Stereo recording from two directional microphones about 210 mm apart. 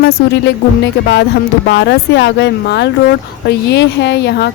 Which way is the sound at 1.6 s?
55° left (ahead or behind).